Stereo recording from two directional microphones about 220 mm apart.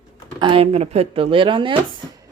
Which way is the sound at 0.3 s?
25° right (ahead or behind).